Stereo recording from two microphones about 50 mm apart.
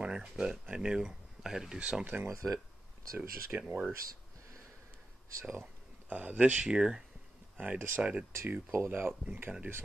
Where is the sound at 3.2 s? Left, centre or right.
Right.